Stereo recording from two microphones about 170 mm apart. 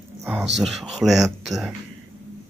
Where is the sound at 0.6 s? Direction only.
Centre (ahead or behind).